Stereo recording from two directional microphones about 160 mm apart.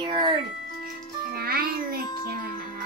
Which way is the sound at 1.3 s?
70° right (ahead or behind).